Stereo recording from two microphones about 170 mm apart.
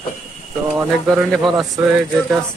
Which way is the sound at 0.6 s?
5° right (ahead or behind).